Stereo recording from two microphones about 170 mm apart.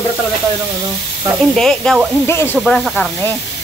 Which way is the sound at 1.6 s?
5° left (ahead or behind).